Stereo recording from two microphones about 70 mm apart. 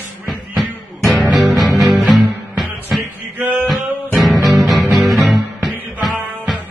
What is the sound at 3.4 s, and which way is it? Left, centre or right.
Male singing, right.